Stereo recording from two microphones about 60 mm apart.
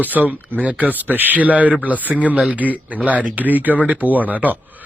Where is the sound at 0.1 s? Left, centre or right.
Centre.